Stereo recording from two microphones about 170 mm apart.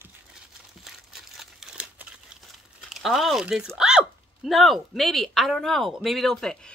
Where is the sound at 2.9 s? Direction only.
Centre (ahead or behind).